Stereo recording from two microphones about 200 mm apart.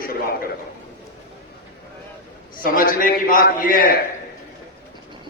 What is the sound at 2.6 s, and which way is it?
A man's voice, 45° left (ahead or behind).